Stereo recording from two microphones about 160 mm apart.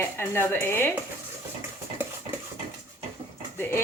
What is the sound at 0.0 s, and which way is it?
Speech, 15° left (ahead or behind).